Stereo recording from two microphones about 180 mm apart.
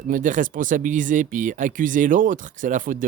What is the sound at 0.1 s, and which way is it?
Speech, 45° right (ahead or behind).